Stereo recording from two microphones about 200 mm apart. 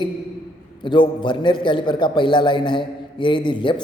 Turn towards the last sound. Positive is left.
turn(degrees=25)  # may be behind; listen again after turning